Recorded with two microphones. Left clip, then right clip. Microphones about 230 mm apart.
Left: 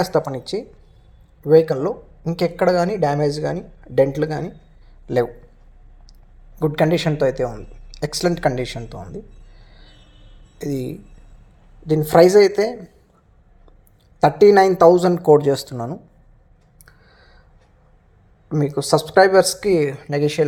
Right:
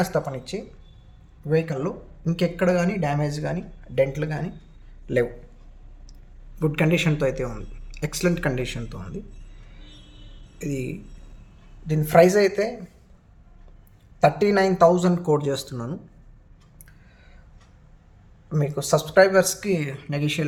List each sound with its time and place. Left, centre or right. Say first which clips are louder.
0.0 s speech: left 5 dB; left
6.6 s speech: left 5 dB; left
10.6 s speech: left 4 dB; left
14.2 s speech: left 7 dB; left
18.4 s speech: left 6 dB; centre